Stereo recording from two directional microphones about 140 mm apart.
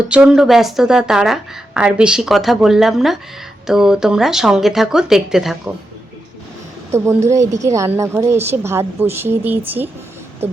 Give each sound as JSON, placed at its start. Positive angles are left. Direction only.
{"t": 0.1, "sound": "speech", "side_deg": -5}
{"t": 6.9, "sound": "a woman's voice", "side_deg": -20}
{"t": 10.4, "sound": "a sound", "side_deg": -15}